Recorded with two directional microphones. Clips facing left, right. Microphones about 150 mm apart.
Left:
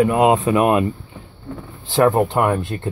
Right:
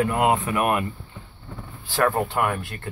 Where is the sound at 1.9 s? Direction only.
20° left (ahead or behind).